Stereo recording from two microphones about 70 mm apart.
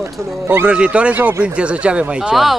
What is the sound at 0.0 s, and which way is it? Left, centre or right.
Speech, right.